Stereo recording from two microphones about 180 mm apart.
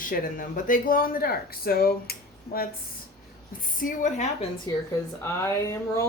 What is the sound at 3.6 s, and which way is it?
Speech, 50° left (ahead or behind).